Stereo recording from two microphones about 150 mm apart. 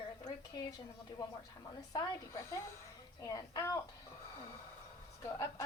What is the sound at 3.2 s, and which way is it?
Speech, 25° left (ahead or behind).